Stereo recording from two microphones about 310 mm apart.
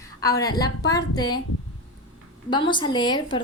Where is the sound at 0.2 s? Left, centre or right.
Centre.